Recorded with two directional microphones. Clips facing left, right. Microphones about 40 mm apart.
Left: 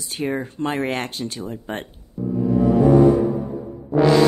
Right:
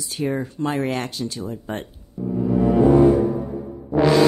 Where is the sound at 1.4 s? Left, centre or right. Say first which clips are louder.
Even; left.